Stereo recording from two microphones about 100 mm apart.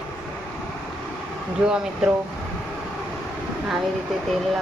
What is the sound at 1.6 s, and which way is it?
Speech, 10° right (ahead or behind).